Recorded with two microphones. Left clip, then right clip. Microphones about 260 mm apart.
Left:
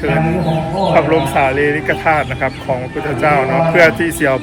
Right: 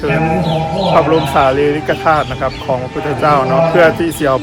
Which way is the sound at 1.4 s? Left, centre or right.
Centre.